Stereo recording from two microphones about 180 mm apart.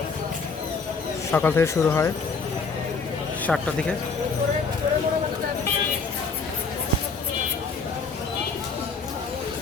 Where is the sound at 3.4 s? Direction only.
5° left (ahead or behind).